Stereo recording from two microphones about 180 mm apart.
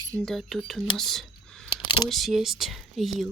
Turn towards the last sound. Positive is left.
turn(degrees=0)  # may be behind; listen again after turning